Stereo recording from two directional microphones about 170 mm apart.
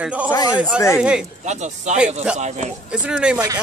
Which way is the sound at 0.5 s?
5° right (ahead or behind).